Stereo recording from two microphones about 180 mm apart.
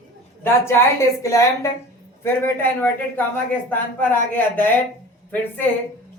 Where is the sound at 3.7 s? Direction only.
10° left (ahead or behind).